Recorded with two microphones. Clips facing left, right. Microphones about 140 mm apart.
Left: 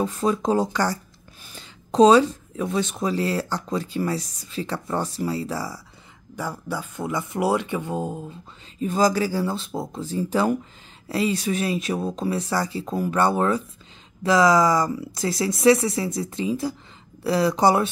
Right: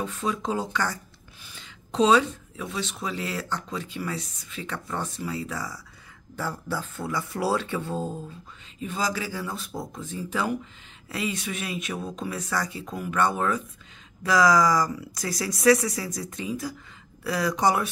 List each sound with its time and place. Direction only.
0.0 s speech: 40° left (ahead or behind)
6.3 s speech: 15° left (ahead or behind)
8.7 s speech: 40° left (ahead or behind)